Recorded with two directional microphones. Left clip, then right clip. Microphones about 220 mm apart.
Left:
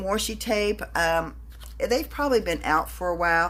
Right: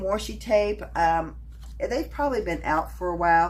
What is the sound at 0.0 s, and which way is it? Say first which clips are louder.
A woman's voice: left 1 dB; 45° left (ahead or behind).